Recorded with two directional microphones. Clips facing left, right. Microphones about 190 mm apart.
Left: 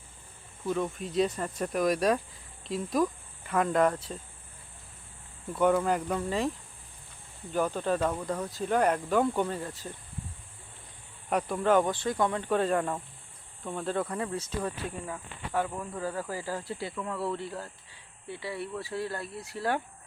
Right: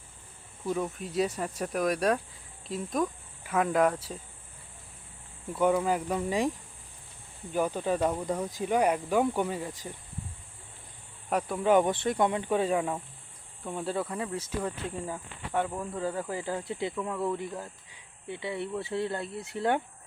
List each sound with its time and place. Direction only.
0.6 s speech: 5° right (ahead or behind)
5.5 s speech: 5° right (ahead or behind)
7.5 s speech: 10° right (ahead or behind)
11.3 s speech: centre (ahead or behind)
11.9 s speech: 25° right (ahead or behind)